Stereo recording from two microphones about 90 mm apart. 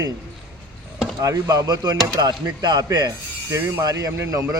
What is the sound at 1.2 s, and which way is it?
A man's voice, 45° right (ahead or behind).